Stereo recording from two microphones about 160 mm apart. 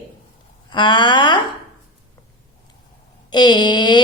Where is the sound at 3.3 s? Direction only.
25° left (ahead or behind).